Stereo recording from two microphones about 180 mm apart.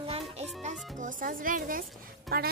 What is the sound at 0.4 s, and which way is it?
A child's voice, 40° right (ahead or behind).